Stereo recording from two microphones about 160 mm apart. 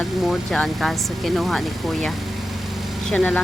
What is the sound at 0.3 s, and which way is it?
Speech, 5° left (ahead or behind).